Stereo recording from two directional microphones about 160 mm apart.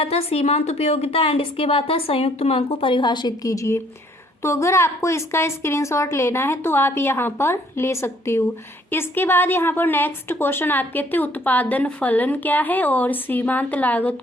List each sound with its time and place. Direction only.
0.0 s a woman's voice: 40° left (ahead or behind); by 14.2 s 10° left (ahead or behind)